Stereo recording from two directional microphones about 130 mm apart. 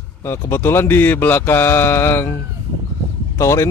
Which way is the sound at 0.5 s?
20° left (ahead or behind).